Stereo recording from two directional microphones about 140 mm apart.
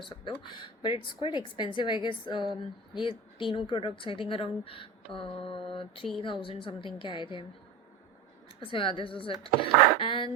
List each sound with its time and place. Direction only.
0.0 s a woman's voice: 35° left (ahead or behind)
8.6 s a woman's voice: 40° left (ahead or behind)